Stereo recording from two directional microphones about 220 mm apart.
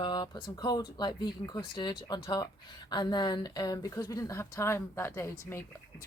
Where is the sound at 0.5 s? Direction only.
20° left (ahead or behind).